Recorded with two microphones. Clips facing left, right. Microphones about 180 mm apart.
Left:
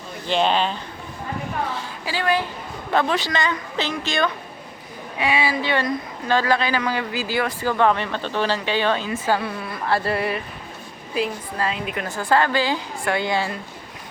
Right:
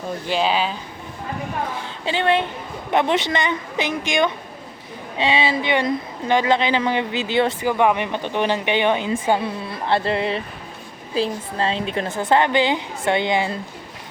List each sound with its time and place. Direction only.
0.3 s speech: 5° right (ahead or behind)
2.0 s speech: 25° right (ahead or behind)